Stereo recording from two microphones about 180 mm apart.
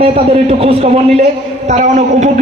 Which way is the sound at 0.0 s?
35° right (ahead or behind).